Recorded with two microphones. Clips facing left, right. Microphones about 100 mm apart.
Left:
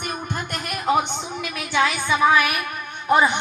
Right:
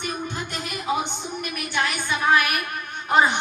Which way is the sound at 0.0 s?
55° left (ahead or behind).